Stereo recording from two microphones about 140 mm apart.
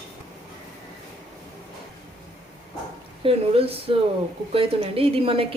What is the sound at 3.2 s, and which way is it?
A woman's voice, 45° right (ahead or behind).